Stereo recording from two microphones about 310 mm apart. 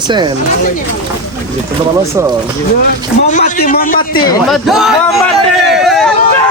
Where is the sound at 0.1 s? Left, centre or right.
Centre.